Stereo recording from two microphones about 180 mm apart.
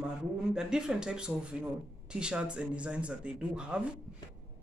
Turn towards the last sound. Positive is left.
turn(degrees=-5)  # may be behind; listen again after turning